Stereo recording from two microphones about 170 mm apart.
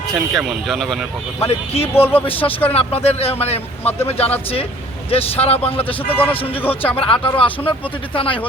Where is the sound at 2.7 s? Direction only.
35° left (ahead or behind).